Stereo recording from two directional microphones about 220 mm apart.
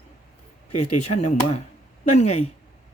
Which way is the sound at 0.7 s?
90° left.